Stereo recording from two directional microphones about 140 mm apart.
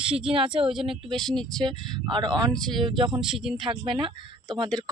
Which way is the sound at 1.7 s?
35° right (ahead or behind).